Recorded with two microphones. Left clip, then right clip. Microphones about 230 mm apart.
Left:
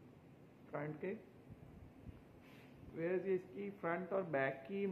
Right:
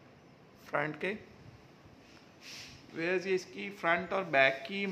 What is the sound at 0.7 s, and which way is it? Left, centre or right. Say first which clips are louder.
Speech: right 11 dB; right.